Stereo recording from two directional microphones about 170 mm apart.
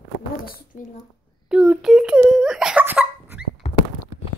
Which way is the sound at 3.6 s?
40° left (ahead or behind).